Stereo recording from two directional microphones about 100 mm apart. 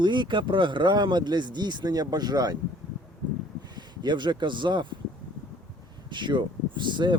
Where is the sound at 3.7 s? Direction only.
45° right (ahead or behind).